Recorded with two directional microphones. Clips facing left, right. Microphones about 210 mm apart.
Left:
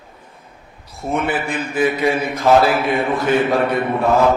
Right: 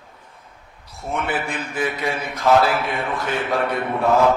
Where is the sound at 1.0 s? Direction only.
5° left (ahead or behind).